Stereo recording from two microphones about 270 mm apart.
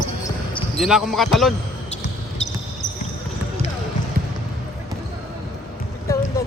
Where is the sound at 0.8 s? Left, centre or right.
Centre.